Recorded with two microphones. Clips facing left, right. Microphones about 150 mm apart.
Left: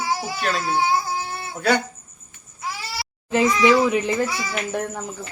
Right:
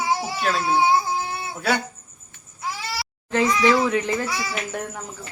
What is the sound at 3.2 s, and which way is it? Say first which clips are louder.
A child's voice: left 2 dB; 10° left (ahead or behind).